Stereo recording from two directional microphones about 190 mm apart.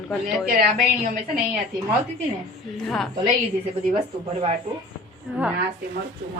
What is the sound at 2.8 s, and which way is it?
Speech, centre (ahead or behind).